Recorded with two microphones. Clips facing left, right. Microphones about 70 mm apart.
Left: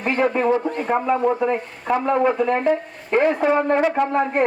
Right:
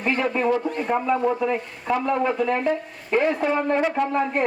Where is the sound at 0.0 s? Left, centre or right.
Left.